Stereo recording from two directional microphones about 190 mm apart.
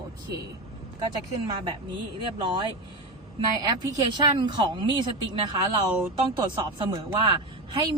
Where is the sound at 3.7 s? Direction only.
25° right (ahead or behind).